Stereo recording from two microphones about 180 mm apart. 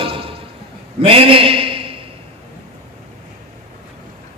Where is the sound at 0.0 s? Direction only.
30° right (ahead or behind).